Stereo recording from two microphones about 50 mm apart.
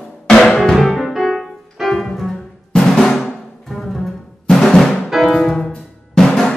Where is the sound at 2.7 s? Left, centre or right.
Centre.